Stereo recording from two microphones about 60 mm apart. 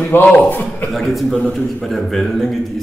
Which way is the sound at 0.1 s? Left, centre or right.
Left.